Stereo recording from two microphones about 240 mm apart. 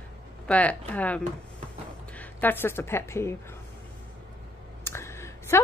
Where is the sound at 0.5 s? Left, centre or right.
Centre.